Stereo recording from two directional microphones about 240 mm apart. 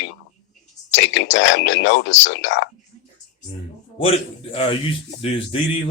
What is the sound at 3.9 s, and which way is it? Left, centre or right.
A man's voice, left.